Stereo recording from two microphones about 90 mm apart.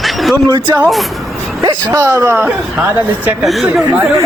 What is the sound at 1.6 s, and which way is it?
Speech, 35° right (ahead or behind).